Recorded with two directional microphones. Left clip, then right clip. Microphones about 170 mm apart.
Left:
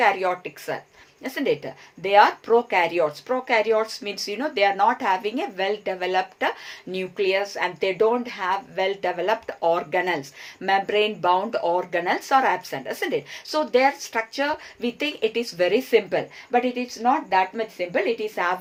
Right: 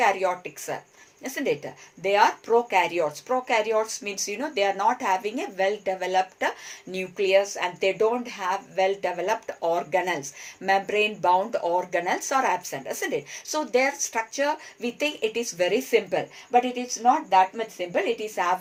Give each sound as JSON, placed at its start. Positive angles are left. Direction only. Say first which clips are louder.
{"t": 0.0, "sound": "speech", "louder": "left 2 dB", "side_deg": 25}